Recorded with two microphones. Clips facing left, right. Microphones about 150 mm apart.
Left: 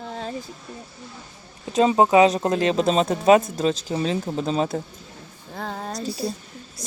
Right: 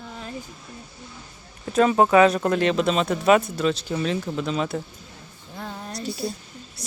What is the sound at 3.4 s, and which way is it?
Speech, 40° left (ahead or behind).